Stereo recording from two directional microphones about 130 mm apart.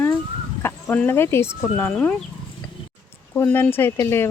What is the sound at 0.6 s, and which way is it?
Speech, 15° left (ahead or behind).